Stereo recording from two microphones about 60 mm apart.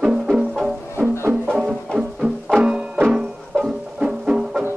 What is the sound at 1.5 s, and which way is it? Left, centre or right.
Music, centre.